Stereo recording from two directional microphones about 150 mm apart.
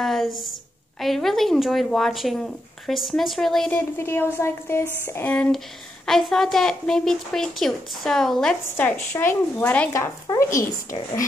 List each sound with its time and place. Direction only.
0.0 s a woman's voice: centre (ahead or behind)
3.7 s a woman's voice: 15° left (ahead or behind)